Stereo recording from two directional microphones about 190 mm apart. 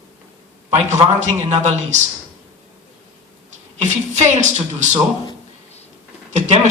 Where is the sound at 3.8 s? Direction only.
40° right (ahead or behind).